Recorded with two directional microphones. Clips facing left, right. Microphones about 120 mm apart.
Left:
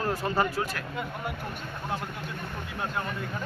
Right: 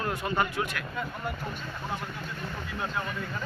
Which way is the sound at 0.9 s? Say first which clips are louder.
Even; 5° left (ahead or behind).